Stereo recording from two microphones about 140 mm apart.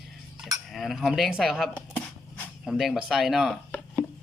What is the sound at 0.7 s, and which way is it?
Speech, centre (ahead or behind).